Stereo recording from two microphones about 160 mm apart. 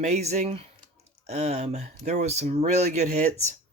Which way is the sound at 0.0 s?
45° right (ahead or behind).